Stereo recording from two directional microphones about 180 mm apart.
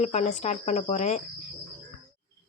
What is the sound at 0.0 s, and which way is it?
Speech, 40° left (ahead or behind).